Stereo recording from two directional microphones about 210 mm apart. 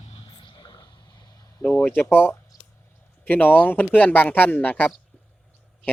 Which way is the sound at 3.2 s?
10° left (ahead or behind).